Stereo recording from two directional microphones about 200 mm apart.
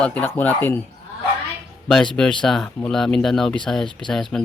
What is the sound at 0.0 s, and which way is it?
Speech, 5° left (ahead or behind).